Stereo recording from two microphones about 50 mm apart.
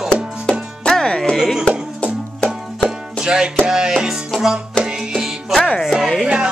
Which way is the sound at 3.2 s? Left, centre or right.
Centre.